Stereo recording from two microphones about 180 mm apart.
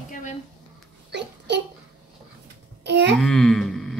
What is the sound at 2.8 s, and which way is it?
Speech, 75° right (ahead or behind).